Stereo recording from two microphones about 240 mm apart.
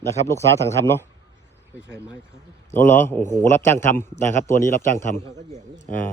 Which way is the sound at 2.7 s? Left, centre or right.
Centre.